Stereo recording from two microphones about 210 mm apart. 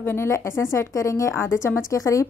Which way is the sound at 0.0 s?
10° left (ahead or behind).